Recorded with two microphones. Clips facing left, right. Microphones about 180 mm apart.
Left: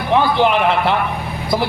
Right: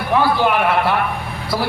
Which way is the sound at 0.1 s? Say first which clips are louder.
Left 2 dB; 20° left (ahead or behind).